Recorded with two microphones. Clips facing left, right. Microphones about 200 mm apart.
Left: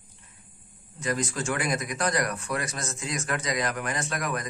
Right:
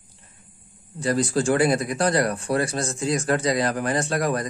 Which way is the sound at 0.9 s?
35° right (ahead or behind).